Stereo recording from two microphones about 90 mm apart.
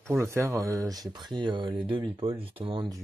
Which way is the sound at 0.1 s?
30° right (ahead or behind).